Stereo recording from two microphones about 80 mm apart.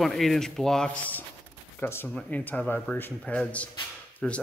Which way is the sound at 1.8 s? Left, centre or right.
Left.